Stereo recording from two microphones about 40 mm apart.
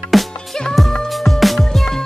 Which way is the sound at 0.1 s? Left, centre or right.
Centre.